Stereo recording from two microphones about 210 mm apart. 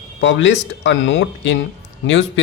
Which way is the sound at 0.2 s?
60° left (ahead or behind).